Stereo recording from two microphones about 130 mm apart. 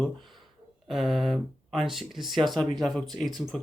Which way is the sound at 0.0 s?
Centre (ahead or behind).